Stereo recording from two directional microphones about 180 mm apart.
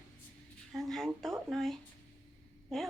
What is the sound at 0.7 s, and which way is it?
Speech, centre (ahead or behind).